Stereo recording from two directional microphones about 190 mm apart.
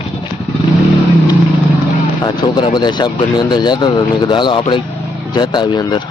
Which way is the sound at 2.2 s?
25° left (ahead or behind).